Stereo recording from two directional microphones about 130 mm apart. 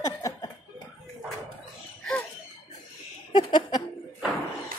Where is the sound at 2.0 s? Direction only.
10° left (ahead or behind).